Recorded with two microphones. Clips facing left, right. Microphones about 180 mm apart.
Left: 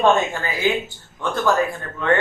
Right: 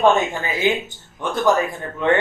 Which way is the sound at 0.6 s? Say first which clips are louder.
Right 1 dB; 20° right (ahead or behind).